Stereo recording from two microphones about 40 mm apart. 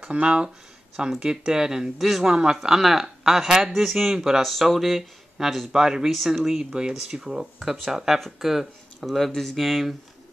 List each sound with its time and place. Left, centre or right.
0.1 s speech: right
2.0 s speech: centre
2.2 s speech: right
2.5 s speech: centre
4.4 s speech: centre
5.7 s speech: centre
6.6 s speech: right
6.9 s speech: centre